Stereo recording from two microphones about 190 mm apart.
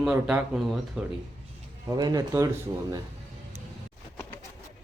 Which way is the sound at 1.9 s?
20° right (ahead or behind).